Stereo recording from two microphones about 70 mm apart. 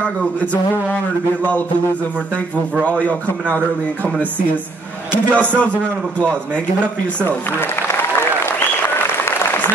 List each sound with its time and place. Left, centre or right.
0.0 s speech: left
2.8 s speech: centre
5.3 s speech: centre
7.2 s a man's voice: left